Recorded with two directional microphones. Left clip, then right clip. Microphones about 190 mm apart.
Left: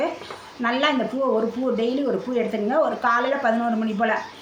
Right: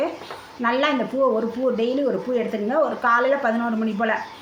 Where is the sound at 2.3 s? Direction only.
5° right (ahead or behind).